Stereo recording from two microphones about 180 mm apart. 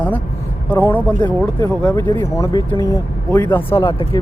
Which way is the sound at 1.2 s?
25° left (ahead or behind).